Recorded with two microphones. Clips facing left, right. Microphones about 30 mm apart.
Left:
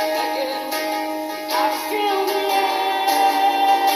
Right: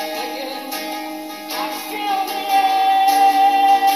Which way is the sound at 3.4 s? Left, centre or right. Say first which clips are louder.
Right 4 dB; centre.